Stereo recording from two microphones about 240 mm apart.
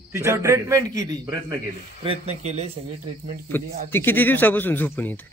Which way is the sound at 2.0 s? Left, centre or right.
Right.